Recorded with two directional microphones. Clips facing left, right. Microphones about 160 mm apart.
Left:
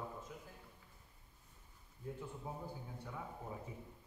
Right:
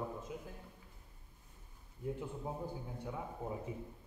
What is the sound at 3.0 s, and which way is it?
Speech, 20° right (ahead or behind).